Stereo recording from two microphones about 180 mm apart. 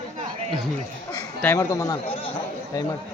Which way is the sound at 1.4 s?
10° left (ahead or behind).